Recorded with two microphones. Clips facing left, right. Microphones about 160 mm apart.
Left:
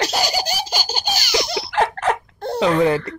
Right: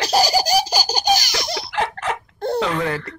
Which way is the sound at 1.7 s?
45° left (ahead or behind).